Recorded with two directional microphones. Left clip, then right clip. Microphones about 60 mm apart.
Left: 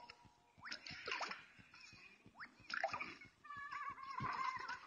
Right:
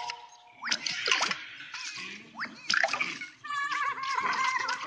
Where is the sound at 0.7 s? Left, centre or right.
Right.